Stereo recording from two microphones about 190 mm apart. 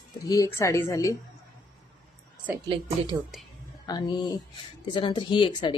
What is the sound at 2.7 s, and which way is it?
Speech, 25° right (ahead or behind).